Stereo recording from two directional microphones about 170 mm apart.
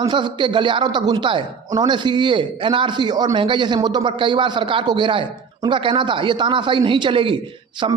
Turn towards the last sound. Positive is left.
turn(degrees=-30)  # may be behind; listen again after turning